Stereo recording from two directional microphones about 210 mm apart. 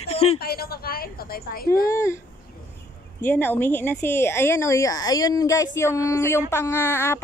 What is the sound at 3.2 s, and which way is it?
Speech, 10° left (ahead or behind).